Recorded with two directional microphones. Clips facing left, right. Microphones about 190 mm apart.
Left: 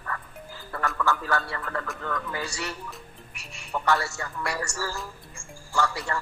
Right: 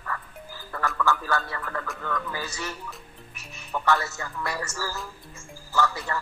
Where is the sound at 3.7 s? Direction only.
Centre (ahead or behind).